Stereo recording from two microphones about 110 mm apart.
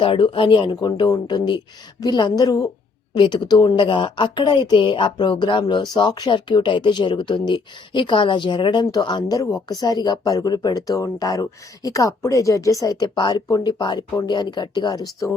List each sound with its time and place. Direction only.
0.0 s speech: 50° left (ahead or behind)
0.8 s speech: 40° left (ahead or behind)